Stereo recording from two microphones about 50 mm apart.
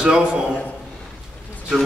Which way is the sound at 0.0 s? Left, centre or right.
Centre.